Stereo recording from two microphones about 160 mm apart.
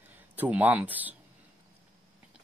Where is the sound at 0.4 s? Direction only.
10° right (ahead or behind).